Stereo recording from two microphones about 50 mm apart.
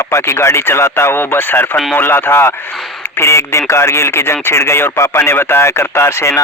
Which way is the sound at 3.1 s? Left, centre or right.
Left.